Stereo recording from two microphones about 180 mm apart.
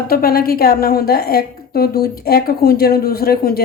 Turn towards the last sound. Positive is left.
turn(degrees=55)  # may be behind; listen again after turning